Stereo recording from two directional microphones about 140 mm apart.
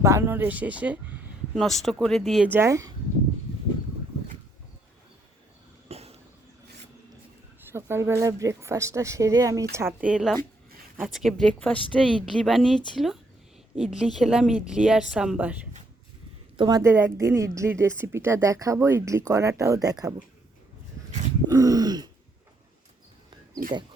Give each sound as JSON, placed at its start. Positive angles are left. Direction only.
{"t": 0.0, "sound": "speech", "side_deg": -20}
{"t": 1.5, "sound": "speech", "side_deg": 0}
{"t": 2.5, "sound": "a woman's voice", "side_deg": -20}
{"t": 5.9, "sound": "a sound", "side_deg": -45}
{"t": 7.7, "sound": "a woman's voice", "side_deg": -20}
{"t": 10.0, "sound": "speech", "side_deg": -5}
{"t": 16.6, "sound": "a woman's voice", "side_deg": -30}
{"t": 16.9, "sound": "a woman's voice", "side_deg": -20}
{"t": 21.5, "sound": "a woman's voice", "side_deg": -25}